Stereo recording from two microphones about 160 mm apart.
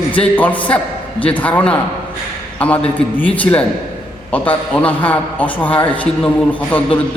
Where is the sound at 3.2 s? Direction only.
10° left (ahead or behind).